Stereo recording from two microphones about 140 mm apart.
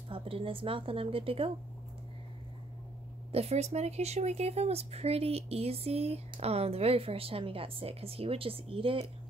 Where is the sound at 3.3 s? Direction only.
45° right (ahead or behind).